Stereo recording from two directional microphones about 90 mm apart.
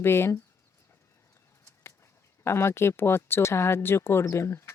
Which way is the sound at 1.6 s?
30° left (ahead or behind).